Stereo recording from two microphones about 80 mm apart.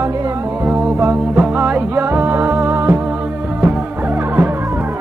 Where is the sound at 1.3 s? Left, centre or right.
Right.